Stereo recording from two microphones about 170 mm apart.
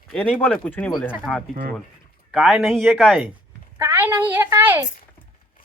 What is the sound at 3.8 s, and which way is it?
A woman's voice, 15° right (ahead or behind).